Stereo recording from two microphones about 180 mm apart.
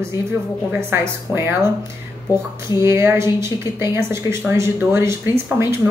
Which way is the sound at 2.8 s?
15° right (ahead or behind).